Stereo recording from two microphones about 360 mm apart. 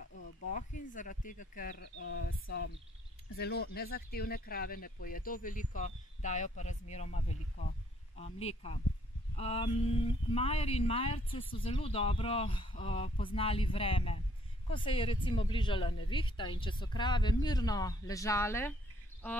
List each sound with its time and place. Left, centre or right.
0.1 s speech: left
2.0 s speech: left; by 19.4 s centre